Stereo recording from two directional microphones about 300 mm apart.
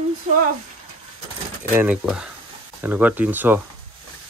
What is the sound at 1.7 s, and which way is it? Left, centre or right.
Speech, centre.